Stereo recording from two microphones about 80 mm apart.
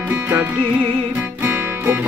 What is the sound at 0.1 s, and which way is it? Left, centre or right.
Music, right.